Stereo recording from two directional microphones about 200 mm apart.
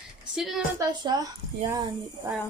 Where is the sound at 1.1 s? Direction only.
20° right (ahead or behind).